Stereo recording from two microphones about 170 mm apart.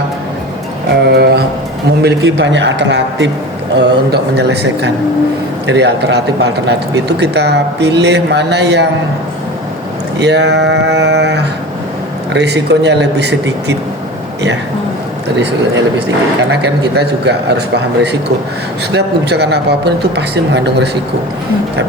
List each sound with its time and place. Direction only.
1.1 s a sound: 75° right (ahead or behind)
2.0 s a man's voice: 85° right
10.2 s speech: 90° right
15.4 s a man's voice: 90° right